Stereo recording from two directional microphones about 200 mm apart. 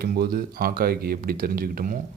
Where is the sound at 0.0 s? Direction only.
50° right (ahead or behind).